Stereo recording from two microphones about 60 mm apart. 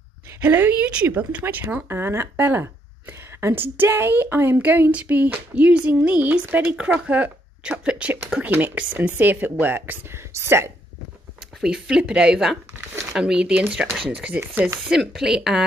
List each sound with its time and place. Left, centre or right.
0.3 s a woman's voice: right
1.4 s a sound: right
1.9 s a woman's voice: right
4.6 s a sound: right
8.5 s a woman's voice: right
11.6 s speech: centre
14.3 s a woman's voice: right
14.9 s speech: centre